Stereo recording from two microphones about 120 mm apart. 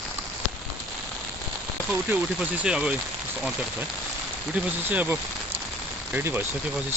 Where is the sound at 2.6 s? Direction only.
10° right (ahead or behind).